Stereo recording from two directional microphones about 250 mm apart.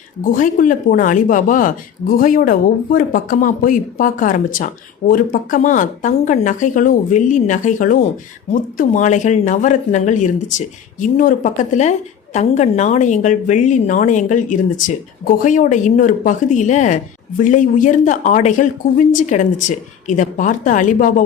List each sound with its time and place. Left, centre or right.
0.2 s a woman's voice: left